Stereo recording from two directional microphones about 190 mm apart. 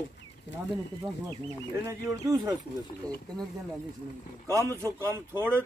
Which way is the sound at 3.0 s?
5° left (ahead or behind).